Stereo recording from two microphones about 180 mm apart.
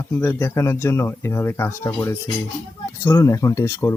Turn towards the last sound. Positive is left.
turn(degrees=15)  # may be behind; listen again after turning